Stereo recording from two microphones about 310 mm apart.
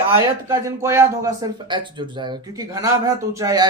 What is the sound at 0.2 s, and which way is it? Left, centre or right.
Speech, centre.